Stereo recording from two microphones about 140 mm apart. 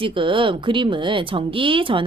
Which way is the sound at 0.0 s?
40° right (ahead or behind).